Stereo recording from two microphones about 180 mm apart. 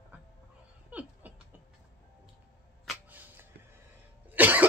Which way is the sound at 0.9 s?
10° right (ahead or behind).